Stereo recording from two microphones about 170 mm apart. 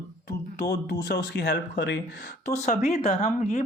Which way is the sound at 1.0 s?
75° left (ahead or behind).